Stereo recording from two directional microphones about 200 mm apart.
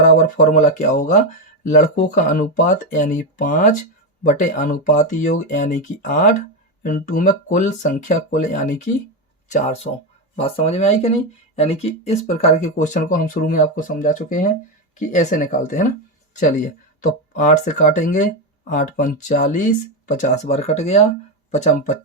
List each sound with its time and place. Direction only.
0.0 s speech: 40° left (ahead or behind)